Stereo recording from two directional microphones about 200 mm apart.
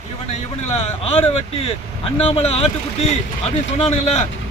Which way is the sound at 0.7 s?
30° left (ahead or behind).